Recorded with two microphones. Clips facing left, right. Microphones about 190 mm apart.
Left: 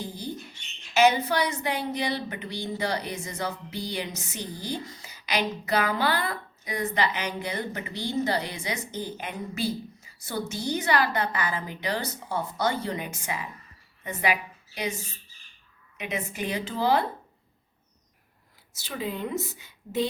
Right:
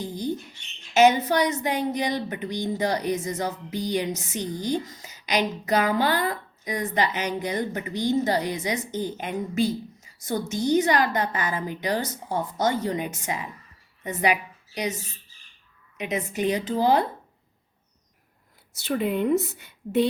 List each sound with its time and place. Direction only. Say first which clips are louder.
0.0 s a sound: right 5 dB; 15° right (ahead or behind)
0.9 s a woman's voice: right 3 dB; 45° right (ahead or behind)
16.0 s speech: right 6 dB; 45° right (ahead or behind)
18.8 s a woman's voice: right 7 dB; 60° right (ahead or behind)